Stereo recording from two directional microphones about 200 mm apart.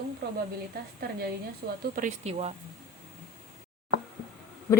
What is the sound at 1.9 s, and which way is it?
Speech, 35° right (ahead or behind).